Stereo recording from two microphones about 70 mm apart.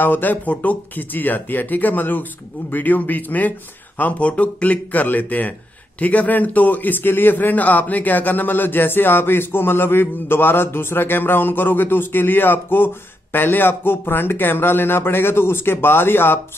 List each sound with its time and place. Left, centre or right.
0.0 s a man's voice: left